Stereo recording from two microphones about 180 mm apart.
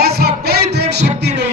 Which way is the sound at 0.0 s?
60° right (ahead or behind).